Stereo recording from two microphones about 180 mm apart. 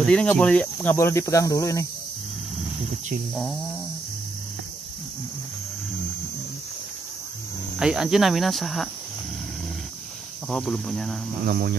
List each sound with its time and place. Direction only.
0.0 s speech: 5° left (ahead or behind)
7.7 s speech: 5° right (ahead or behind)
10.5 s speech: centre (ahead or behind)
11.4 s speech: 60° right (ahead or behind)